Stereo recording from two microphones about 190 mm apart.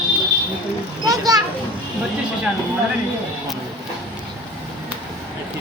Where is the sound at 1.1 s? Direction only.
20° right (ahead or behind).